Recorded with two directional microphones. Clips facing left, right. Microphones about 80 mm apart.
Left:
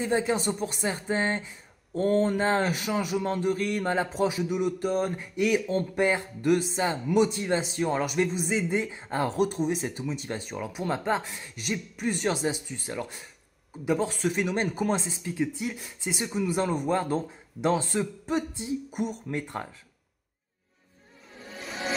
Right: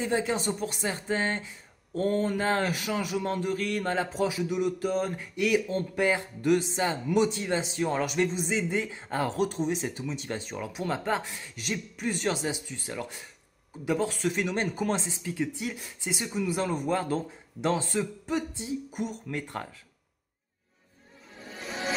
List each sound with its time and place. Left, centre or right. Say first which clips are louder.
0.0 s speech: left 2 dB; centre
2.0 s speech: left 3 dB; left
6.4 s speech: left 1 dB; centre
15.8 s speech: left 2 dB; left